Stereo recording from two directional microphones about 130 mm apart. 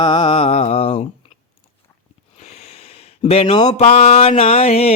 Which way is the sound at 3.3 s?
50° left (ahead or behind).